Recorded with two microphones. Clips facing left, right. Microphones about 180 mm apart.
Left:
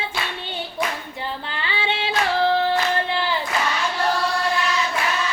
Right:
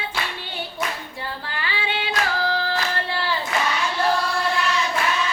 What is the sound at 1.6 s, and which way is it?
Singing, 25° left (ahead or behind).